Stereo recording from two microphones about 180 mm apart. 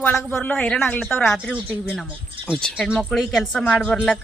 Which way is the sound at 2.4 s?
Centre (ahead or behind).